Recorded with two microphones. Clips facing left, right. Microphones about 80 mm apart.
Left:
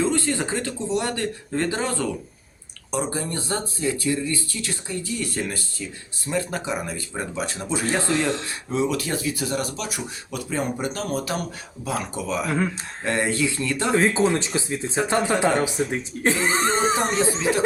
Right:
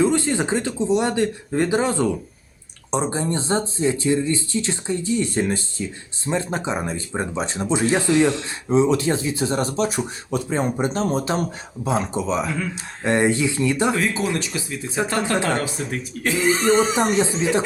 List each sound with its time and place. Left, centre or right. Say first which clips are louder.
0.0 s speech: right 4 dB; right
13.9 s speech: left 3 dB; left